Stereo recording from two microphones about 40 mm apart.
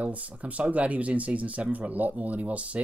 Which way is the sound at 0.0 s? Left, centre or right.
Right.